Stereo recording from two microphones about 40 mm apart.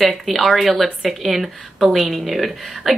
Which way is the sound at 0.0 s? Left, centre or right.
Centre.